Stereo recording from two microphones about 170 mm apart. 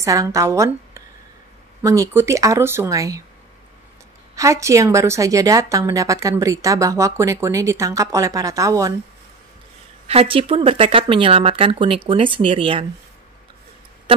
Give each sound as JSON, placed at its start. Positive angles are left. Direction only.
{"t": 0.0, "sound": "a woman's voice", "side_deg": -20}
{"t": 4.4, "sound": "a woman's voice", "side_deg": -15}
{"t": 10.0, "sound": "speech", "side_deg": -35}